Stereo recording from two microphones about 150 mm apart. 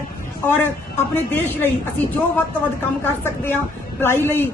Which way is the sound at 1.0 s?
15° left (ahead or behind).